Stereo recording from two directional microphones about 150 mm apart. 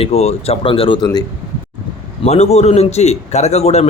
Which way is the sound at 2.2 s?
45° left (ahead or behind).